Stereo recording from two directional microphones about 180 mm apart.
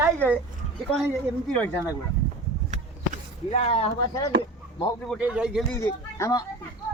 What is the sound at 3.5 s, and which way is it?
Speech, 35° left (ahead or behind).